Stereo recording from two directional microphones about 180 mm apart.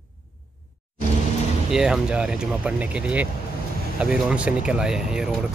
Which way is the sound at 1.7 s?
5° right (ahead or behind).